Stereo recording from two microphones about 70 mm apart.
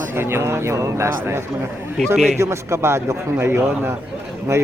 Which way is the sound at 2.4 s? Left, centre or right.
Right.